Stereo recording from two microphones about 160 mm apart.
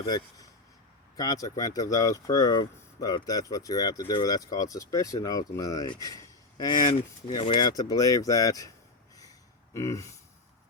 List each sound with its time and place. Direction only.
0.0 s speech: 25° left (ahead or behind)
9.7 s speech: 20° left (ahead or behind)